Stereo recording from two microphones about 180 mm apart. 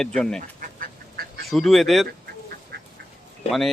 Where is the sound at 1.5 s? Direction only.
Centre (ahead or behind).